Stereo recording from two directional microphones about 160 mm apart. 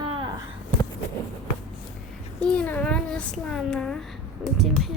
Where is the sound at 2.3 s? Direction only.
5° left (ahead or behind).